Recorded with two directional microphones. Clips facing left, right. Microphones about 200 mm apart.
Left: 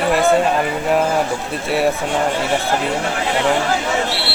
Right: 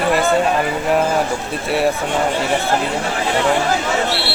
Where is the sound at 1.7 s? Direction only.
Centre (ahead or behind).